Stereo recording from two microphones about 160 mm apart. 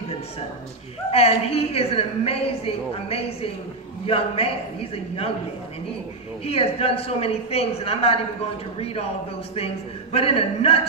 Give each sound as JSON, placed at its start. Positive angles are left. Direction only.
{"t": 1.1, "sound": "a woman's voice", "side_deg": 40}
{"t": 6.4, "sound": "a woman's voice", "side_deg": 40}
{"t": 10.1, "sound": "a woman's voice", "side_deg": 40}